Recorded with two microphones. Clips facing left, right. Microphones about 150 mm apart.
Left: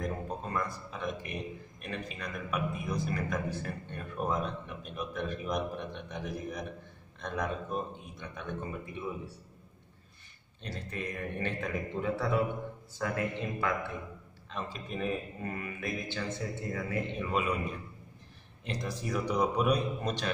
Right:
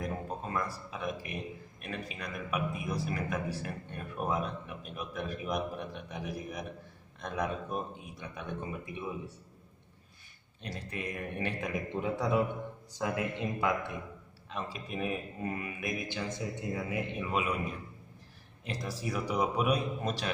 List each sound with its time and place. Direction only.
0.0 s a man's voice: 5° right (ahead or behind)
10.6 s a man's voice: 10° right (ahead or behind)
18.7 s speech: 5° right (ahead or behind)